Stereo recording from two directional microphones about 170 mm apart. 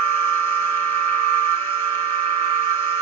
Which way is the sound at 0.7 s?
35° right (ahead or behind).